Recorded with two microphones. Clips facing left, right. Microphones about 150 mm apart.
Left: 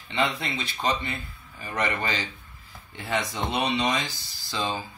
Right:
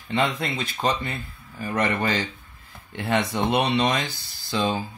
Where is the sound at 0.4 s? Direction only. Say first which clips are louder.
Right 4 dB; 45° right (ahead or behind).